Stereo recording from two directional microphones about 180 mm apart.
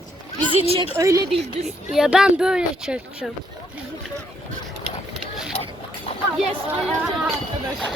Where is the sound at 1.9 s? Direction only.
5° right (ahead or behind).